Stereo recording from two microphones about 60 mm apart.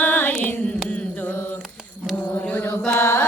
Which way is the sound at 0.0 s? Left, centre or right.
Left.